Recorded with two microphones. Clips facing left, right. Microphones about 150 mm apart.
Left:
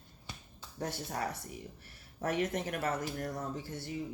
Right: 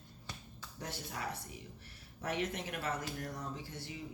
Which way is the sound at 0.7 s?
45° left (ahead or behind).